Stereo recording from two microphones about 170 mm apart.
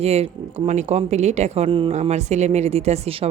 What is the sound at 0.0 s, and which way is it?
Speech, 40° right (ahead or behind).